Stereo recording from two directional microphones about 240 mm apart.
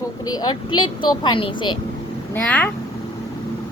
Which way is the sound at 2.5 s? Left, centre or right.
Centre.